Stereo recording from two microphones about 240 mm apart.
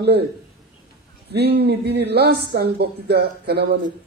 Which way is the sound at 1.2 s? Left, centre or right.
Right.